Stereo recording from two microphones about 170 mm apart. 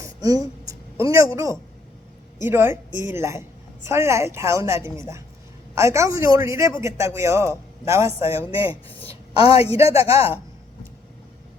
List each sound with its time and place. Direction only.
0.0 s a sound: 20° right (ahead or behind)
2.4 s a man's voice: 15° right (ahead or behind)
8.5 s a woman's voice: 35° left (ahead or behind)
9.8 s a man's voice: 15° right (ahead or behind)
10.1 s a man's voice: 35° left (ahead or behind)